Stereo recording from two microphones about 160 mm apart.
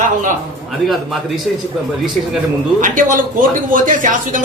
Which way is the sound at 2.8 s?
55° right (ahead or behind).